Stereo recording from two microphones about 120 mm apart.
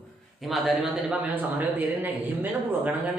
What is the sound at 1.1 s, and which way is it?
Speech, 15° right (ahead or behind).